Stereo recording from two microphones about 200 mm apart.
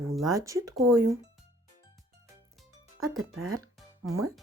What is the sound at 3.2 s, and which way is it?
Speech, 90° right.